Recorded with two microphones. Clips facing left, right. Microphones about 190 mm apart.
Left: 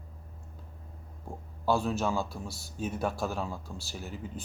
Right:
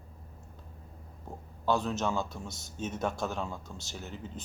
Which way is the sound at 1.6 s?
10° left (ahead or behind).